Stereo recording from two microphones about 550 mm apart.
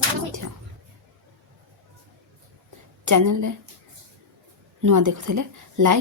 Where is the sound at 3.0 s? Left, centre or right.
Right.